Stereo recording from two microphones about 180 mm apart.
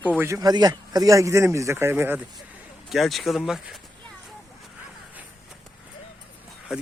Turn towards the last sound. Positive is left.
turn(degrees=-5)  # may be behind; listen again after turning